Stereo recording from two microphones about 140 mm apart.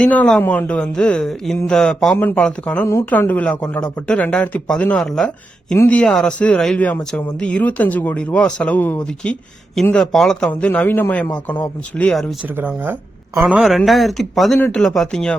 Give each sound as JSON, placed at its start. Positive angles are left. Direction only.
{"t": 0.0, "sound": "speech", "side_deg": 10}
{"t": 5.7, "sound": "speech", "side_deg": 15}
{"t": 6.0, "sound": "speech", "side_deg": 5}
{"t": 12.5, "sound": "speech", "side_deg": -15}